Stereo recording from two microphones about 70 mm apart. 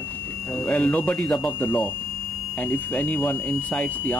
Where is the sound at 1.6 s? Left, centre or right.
Left.